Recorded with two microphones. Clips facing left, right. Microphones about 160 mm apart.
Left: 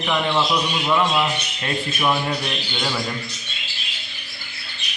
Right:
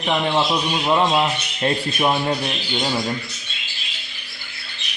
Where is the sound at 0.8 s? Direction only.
35° right (ahead or behind).